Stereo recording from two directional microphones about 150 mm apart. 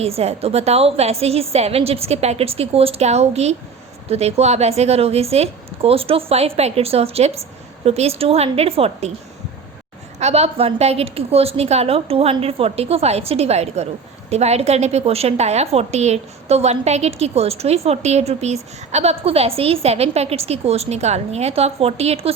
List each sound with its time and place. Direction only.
0.0 s a woman's voice: 45° right (ahead or behind)
10.2 s a woman's voice: 45° right (ahead or behind)